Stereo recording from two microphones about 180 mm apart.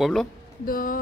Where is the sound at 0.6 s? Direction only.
50° left (ahead or behind).